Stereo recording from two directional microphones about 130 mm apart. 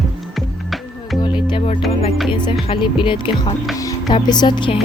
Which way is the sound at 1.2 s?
40° left (ahead or behind).